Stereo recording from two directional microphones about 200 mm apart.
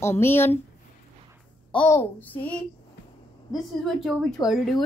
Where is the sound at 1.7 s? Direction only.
10° left (ahead or behind).